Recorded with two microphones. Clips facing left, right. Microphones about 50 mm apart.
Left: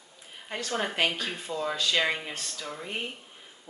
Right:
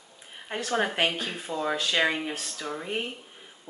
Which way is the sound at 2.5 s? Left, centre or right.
Right.